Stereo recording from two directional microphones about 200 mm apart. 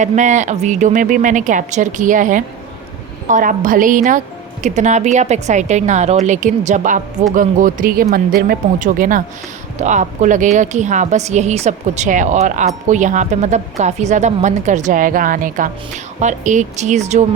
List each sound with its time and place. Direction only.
0.0 s a woman's voice: 35° right (ahead or behind)